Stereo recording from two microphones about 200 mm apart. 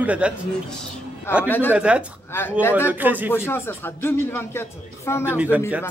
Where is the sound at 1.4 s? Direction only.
10° left (ahead or behind).